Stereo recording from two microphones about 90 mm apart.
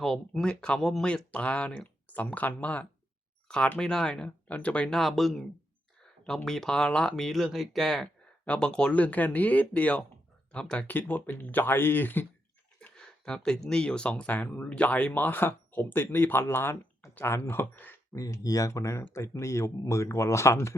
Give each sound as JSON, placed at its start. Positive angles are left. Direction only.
{"t": 0.0, "sound": "speech", "side_deg": 5}
{"t": 4.9, "sound": "speech", "side_deg": 0}
{"t": 12.8, "sound": "speech", "side_deg": 10}
{"t": 18.1, "sound": "speech", "side_deg": 40}